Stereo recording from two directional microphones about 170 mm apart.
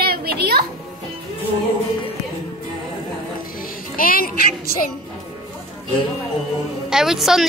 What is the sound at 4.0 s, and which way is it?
Music, 55° left (ahead or behind).